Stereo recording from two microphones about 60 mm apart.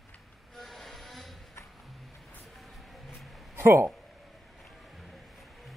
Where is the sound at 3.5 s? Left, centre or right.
Right.